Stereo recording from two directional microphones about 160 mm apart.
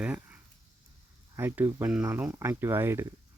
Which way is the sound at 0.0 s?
10° right (ahead or behind).